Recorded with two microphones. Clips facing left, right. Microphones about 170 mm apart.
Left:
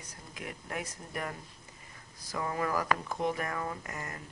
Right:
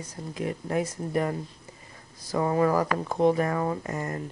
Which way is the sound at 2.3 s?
30° right (ahead or behind).